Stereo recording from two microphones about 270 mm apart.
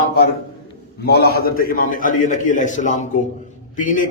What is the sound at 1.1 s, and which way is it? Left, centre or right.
A man's voice, left.